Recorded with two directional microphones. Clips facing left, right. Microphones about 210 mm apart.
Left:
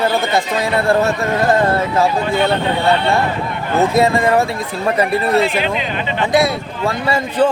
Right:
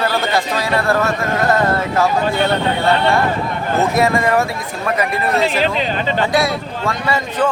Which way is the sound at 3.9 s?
25° left (ahead or behind).